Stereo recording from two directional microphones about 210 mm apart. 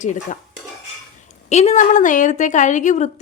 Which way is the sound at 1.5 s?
30° left (ahead or behind).